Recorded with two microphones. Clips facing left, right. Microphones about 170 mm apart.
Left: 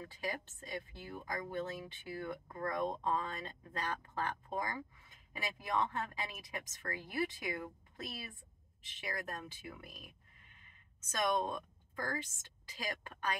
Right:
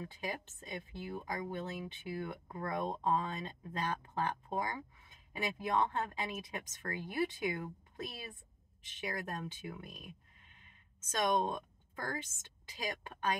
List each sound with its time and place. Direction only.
0.1 s a woman's voice: 15° right (ahead or behind)
11.1 s a woman's voice: 20° right (ahead or behind)